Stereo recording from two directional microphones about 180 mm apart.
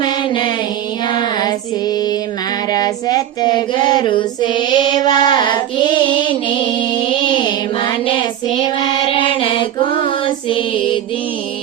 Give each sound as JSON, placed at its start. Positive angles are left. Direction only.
{"t": 0.0, "sound": "music", "side_deg": 25}
{"t": 1.0, "sound": "female singing", "side_deg": 25}
{"t": 2.7, "sound": "child singing", "side_deg": 20}
{"t": 6.7, "sound": "music", "side_deg": 30}
{"t": 8.6, "sound": "child singing", "side_deg": 25}